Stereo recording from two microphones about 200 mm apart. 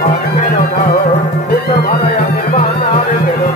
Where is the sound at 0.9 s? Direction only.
35° left (ahead or behind).